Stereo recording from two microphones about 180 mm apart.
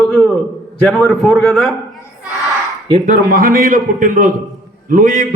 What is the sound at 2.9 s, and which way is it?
A man's voice, 45° right (ahead or behind).